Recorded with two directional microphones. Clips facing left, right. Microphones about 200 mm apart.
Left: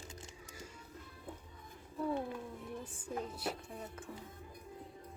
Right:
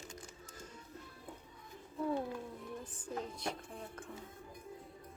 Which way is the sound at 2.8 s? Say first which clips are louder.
Left 1 dB; 10° left (ahead or behind).